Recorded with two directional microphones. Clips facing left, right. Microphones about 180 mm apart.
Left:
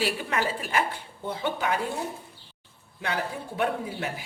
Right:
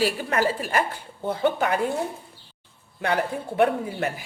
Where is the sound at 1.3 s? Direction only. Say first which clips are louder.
Right 6 dB; 50° right (ahead or behind).